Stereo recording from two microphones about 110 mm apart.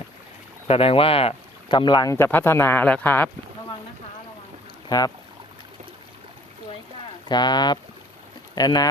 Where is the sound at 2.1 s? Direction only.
20° left (ahead or behind).